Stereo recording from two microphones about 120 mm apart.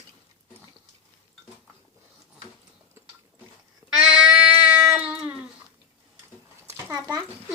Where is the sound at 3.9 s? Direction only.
5° right (ahead or behind).